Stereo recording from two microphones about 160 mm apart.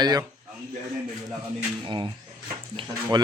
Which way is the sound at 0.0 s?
25° right (ahead or behind).